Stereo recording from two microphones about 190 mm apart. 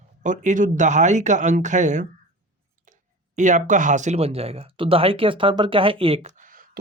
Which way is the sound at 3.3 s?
40° right (ahead or behind).